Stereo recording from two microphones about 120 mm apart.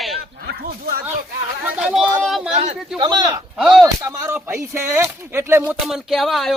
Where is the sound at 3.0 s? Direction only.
35° right (ahead or behind).